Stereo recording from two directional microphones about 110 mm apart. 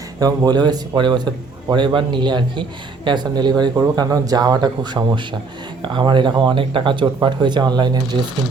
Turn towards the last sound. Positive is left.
turn(degrees=-40)  # may be behind; listen again after turning